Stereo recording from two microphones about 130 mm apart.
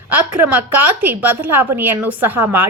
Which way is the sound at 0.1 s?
10° right (ahead or behind).